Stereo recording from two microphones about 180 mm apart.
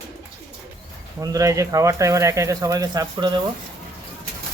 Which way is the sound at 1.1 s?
20° right (ahead or behind).